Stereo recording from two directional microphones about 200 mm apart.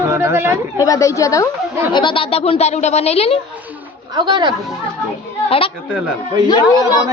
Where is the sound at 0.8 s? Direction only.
15° left (ahead or behind).